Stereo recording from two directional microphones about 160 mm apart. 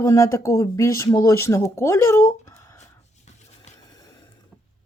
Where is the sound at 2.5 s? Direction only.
20° left (ahead or behind).